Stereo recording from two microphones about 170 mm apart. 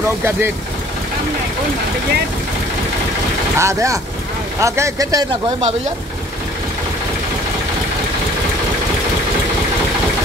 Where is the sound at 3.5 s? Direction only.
15° right (ahead or behind).